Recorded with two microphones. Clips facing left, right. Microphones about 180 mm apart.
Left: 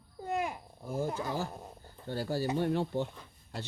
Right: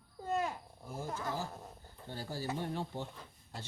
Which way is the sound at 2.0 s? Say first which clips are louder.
Left 8 dB; 75° left (ahead or behind).